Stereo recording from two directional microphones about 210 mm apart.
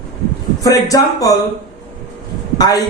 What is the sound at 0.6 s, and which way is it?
Speech, 15° left (ahead or behind).